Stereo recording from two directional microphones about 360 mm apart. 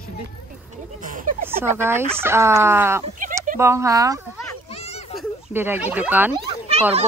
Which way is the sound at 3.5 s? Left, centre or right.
Centre.